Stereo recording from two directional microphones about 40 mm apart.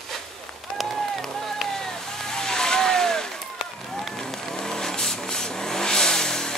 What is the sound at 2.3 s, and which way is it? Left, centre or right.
Vehicle, centre.